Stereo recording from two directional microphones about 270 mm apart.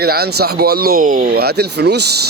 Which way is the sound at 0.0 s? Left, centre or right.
Right.